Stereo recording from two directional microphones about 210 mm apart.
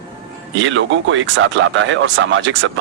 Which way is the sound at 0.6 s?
60° right (ahead or behind).